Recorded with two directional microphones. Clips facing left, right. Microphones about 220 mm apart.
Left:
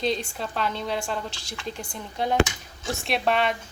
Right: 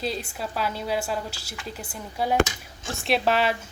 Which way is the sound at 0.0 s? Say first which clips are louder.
Left 3 dB; 5° right (ahead or behind).